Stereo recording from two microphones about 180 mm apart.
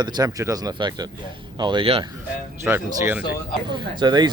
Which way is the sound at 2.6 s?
10° right (ahead or behind).